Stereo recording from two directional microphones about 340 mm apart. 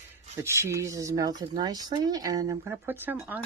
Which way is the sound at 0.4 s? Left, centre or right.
Centre.